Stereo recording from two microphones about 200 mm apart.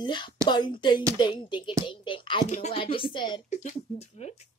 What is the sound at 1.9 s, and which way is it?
Whispering, 25° left (ahead or behind).